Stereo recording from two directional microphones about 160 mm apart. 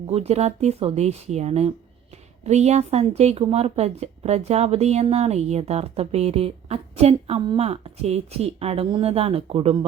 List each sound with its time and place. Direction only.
0.1 s speech: 40° right (ahead or behind)